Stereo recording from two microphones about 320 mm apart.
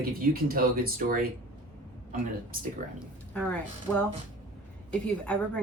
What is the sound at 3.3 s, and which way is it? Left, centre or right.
Speech, centre.